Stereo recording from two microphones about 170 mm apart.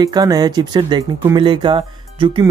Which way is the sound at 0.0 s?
20° right (ahead or behind).